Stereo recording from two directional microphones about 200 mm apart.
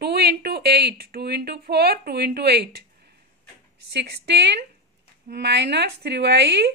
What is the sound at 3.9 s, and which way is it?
A woman's voice, 55° right (ahead or behind).